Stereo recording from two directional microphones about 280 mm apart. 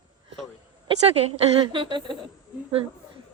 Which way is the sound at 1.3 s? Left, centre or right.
Centre.